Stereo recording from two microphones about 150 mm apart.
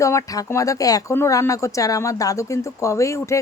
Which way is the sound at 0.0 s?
20° left (ahead or behind).